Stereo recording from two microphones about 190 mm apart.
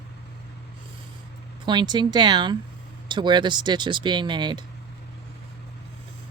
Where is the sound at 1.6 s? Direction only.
25° right (ahead or behind).